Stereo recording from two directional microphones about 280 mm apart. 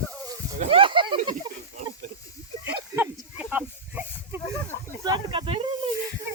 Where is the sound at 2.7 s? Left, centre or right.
Centre.